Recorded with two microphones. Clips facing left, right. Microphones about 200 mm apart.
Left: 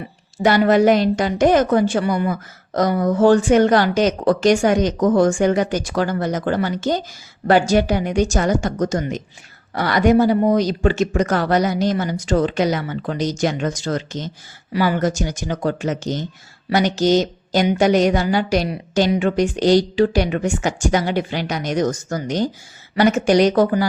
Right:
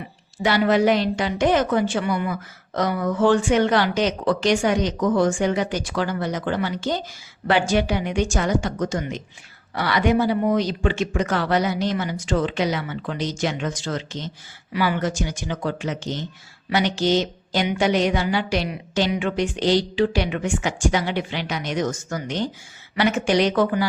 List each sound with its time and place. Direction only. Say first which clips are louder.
0.3 s a woman's voice: left 4 dB; 45° left (ahead or behind)